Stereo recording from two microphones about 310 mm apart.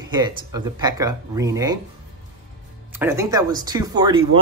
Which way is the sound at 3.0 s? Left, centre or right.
Centre.